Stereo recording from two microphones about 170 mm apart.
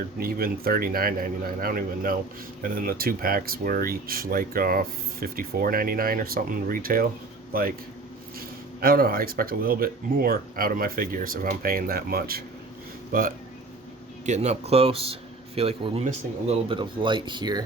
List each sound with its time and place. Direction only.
0.2 s speech: 60° right (ahead or behind)
14.3 s speech: 40° right (ahead or behind); by 17.6 s 25° right (ahead or behind)